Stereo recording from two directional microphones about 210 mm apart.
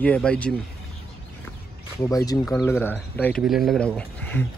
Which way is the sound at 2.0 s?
15° left (ahead or behind).